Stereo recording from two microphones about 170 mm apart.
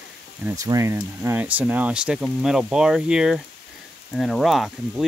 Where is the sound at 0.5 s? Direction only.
20° right (ahead or behind).